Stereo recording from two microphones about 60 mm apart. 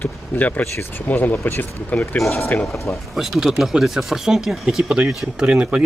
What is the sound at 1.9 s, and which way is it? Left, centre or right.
Speech, left.